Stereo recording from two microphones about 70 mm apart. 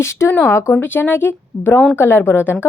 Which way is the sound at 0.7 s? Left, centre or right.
Left.